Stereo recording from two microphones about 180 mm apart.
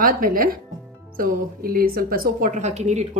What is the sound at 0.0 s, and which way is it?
A woman's voice, 50° right (ahead or behind).